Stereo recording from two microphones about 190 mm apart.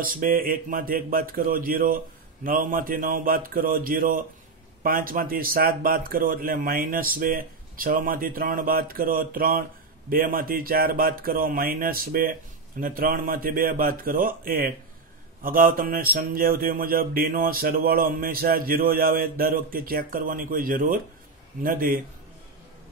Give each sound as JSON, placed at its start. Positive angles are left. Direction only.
{"t": 0.0, "sound": "speech", "side_deg": -45}